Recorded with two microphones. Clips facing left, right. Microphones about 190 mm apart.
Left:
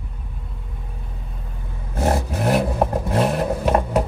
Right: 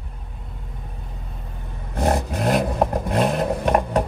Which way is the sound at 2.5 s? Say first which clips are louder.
Left 1 dB; 10° left (ahead or behind).